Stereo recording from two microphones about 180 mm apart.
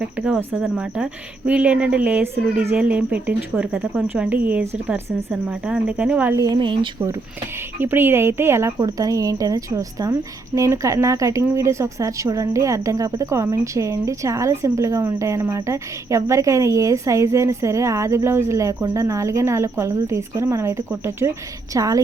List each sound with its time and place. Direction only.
0.0 s a woman's voice: 5° right (ahead or behind); by 7.1 s 25° right (ahead or behind)
7.8 s a woman's voice: 10° right (ahead or behind)